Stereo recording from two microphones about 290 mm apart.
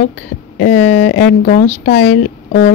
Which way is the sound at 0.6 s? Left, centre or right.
Left.